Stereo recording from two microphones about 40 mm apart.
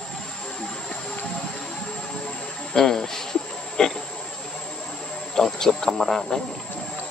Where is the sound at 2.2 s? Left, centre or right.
Left.